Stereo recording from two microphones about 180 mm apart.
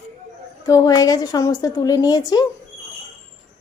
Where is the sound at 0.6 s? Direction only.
20° left (ahead or behind).